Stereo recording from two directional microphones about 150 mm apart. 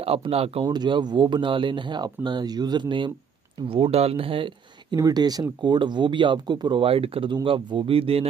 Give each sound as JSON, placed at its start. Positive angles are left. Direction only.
{"t": 0.0, "sound": "speech", "side_deg": -40}
{"t": 4.9, "sound": "speech", "side_deg": -25}